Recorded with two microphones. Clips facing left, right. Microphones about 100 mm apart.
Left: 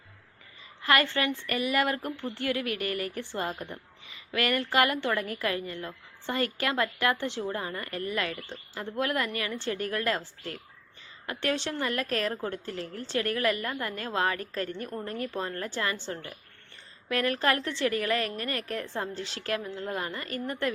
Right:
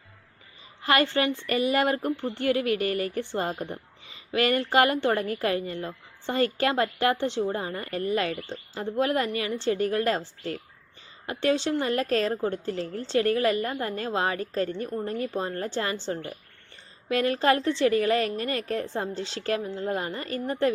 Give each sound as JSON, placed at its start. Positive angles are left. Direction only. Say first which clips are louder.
{"t": 0.8, "sound": "a woman's voice", "louder": "right 3 dB", "side_deg": -25}
{"t": 11.4, "sound": "a woman's voice", "louder": "right 6 dB", "side_deg": -20}
{"t": 16.1, "sound": "speech", "louder": "right 6 dB", "side_deg": -40}
{"t": 17.1, "sound": "a woman's voice", "louder": "right 4 dB", "side_deg": -25}